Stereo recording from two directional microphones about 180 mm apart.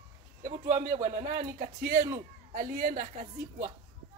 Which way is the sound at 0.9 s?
45° right (ahead or behind).